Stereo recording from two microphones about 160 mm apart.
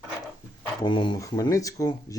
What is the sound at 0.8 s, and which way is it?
A man's voice, 30° left (ahead or behind).